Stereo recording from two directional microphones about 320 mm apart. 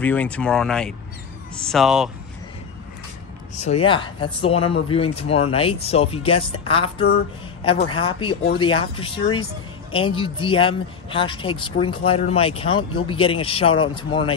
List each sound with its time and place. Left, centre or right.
0.0 s speech: centre
3.5 s speech: centre